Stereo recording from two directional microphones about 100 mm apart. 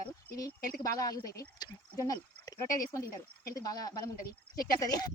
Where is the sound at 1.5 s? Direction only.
40° left (ahead or behind).